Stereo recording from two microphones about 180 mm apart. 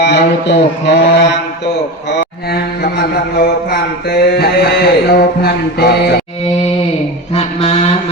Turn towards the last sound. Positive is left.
turn(degrees=40)  # may be behind; listen again after turning